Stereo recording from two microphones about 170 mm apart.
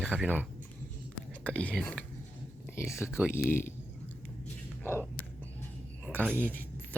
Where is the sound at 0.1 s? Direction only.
10° right (ahead or behind).